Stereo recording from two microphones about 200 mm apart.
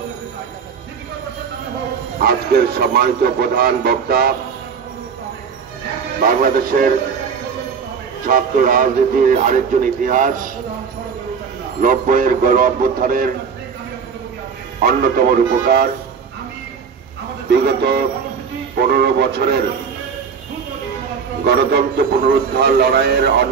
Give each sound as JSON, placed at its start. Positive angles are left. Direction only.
{"t": 2.1, "sound": "a man's voice", "side_deg": -50}
{"t": 6.2, "sound": "a man's voice", "side_deg": -45}
{"t": 8.3, "sound": "speech", "side_deg": -45}
{"t": 11.8, "sound": "a man's voice", "side_deg": -45}
{"t": 14.8, "sound": "a man's voice", "side_deg": -50}
{"t": 17.5, "sound": "a man's voice", "side_deg": -55}
{"t": 21.5, "sound": "a man's voice", "side_deg": -55}